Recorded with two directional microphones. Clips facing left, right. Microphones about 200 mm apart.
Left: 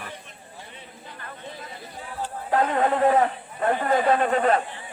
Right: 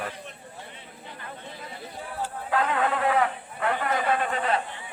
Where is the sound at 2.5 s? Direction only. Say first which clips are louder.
Left 4 dB; 40° left (ahead or behind).